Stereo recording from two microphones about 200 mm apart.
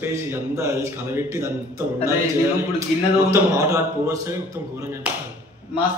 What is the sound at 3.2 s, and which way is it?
A man's voice, 15° right (ahead or behind).